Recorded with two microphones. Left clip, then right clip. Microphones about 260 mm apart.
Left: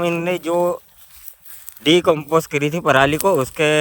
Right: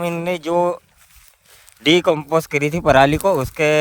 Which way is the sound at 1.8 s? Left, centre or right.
Centre.